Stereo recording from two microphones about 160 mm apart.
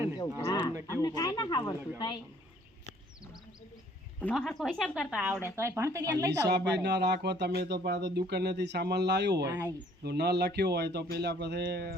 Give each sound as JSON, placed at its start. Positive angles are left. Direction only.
{"t": 0.2, "sound": "speech", "side_deg": 25}
{"t": 0.7, "sound": "speech", "side_deg": -20}
{"t": 1.0, "sound": "speech", "side_deg": 25}
{"t": 4.4, "sound": "speech", "side_deg": 0}
{"t": 6.4, "sound": "speech", "side_deg": -90}
{"t": 9.5, "sound": "speech", "side_deg": -10}
{"t": 10.0, "sound": "speech", "side_deg": -90}